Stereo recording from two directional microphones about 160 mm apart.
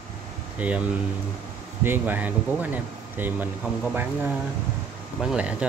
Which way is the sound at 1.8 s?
10° right (ahead or behind).